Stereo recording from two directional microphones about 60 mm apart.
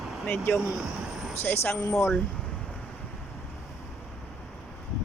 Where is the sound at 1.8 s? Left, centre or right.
Left.